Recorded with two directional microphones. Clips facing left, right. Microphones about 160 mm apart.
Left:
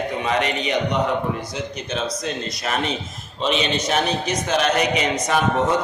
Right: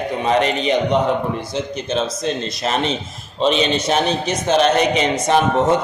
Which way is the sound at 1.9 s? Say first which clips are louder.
Right 4 dB; 25° right (ahead or behind).